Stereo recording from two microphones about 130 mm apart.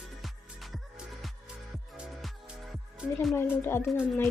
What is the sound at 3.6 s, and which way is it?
Speech, 20° left (ahead or behind).